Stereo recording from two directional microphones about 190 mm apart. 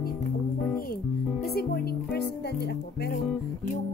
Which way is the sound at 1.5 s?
55° left (ahead or behind).